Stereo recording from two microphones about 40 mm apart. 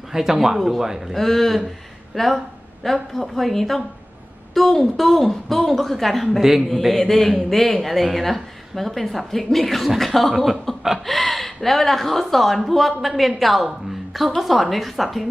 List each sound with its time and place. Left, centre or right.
0.1 s a man's voice: centre
1.1 s a woman's voice: centre